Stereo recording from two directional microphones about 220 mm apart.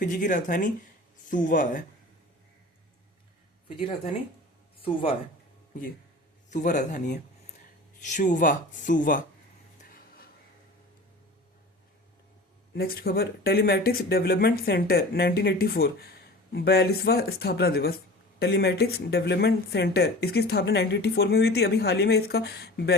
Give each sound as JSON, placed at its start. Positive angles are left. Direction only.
{"t": 0.0, "sound": "speech", "side_deg": 35}
{"t": 3.8, "sound": "speech", "side_deg": 25}
{"t": 6.5, "sound": "speech", "side_deg": 35}
{"t": 9.8, "sound": "a sound", "side_deg": 40}
{"t": 12.7, "sound": "speech", "side_deg": 45}